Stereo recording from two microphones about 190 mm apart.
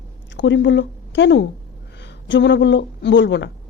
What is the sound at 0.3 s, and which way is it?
Speech, 70° left (ahead or behind).